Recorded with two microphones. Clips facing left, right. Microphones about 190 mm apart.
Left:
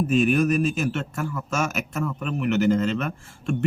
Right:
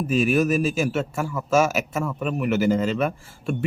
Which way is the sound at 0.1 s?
5° right (ahead or behind).